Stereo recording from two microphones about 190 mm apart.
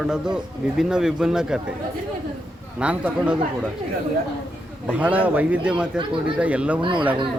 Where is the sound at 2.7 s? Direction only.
5° right (ahead or behind).